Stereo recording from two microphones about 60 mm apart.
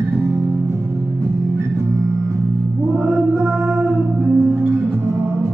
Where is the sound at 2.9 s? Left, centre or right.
Right.